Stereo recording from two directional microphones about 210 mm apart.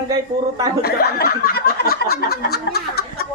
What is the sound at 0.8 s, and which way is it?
Chuckle, 45° left (ahead or behind).